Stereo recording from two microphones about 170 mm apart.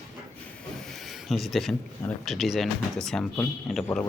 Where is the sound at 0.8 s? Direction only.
Centre (ahead or behind).